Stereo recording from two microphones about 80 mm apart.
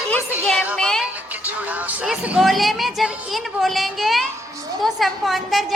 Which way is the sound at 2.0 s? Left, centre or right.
Centre.